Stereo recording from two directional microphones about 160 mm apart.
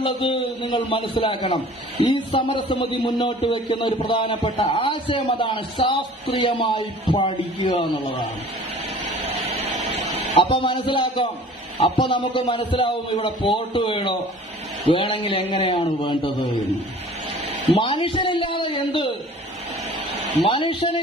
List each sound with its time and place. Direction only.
0.0 s a man's voice: 35° left (ahead or behind)
9.1 s a sound: 40° right (ahead or behind)
10.3 s a man's voice: 35° left (ahead or behind)
17.7 s a man's voice: 35° left (ahead or behind)
20.4 s a man's voice: 35° left (ahead or behind)